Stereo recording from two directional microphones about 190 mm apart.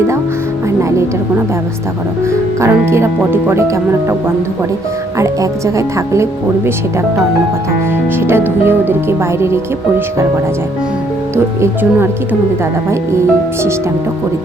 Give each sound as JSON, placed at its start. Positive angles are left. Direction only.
{"t": 0.8, "sound": "speech", "side_deg": -15}
{"t": 2.6, "sound": "speech", "side_deg": -15}
{"t": 5.1, "sound": "speech", "side_deg": -15}
{"t": 8.3, "sound": "speech", "side_deg": -10}
{"t": 11.6, "sound": "speech", "side_deg": -10}